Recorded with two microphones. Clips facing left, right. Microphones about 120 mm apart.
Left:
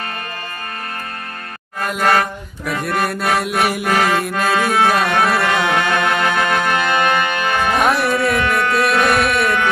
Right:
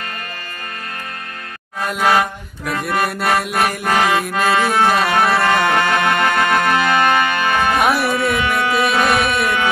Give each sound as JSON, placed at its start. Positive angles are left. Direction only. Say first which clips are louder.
{"t": 1.8, "sound": "chant", "louder": "even", "side_deg": 0}
{"t": 3.9, "sound": "music", "louder": "right 2 dB", "side_deg": 0}